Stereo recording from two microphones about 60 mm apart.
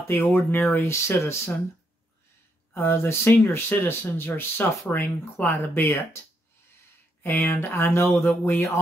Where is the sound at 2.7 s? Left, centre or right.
Left.